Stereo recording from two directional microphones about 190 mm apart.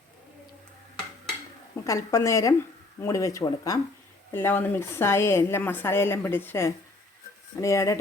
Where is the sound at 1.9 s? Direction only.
15° left (ahead or behind).